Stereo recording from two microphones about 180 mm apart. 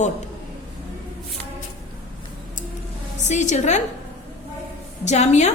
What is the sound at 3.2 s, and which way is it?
Speech, 40° left (ahead or behind).